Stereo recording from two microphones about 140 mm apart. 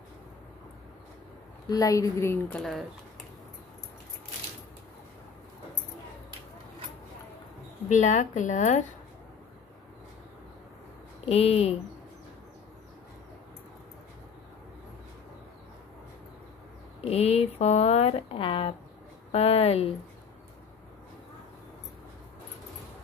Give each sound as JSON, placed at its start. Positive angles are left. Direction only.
{"t": 1.7, "sound": "a woman's voice", "side_deg": 25}
{"t": 7.9, "sound": "a woman's voice", "side_deg": 60}
{"t": 11.2, "sound": "speech", "side_deg": 45}
{"t": 17.1, "sound": "speech", "side_deg": 50}